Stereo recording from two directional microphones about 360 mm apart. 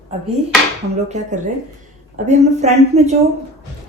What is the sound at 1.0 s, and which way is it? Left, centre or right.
Speech, centre.